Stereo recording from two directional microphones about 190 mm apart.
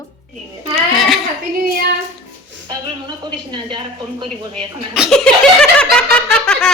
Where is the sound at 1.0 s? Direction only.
Centre (ahead or behind).